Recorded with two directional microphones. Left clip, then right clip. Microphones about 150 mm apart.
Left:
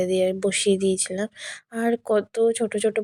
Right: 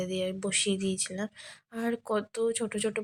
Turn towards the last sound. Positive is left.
turn(degrees=30)  # may be behind; listen again after turning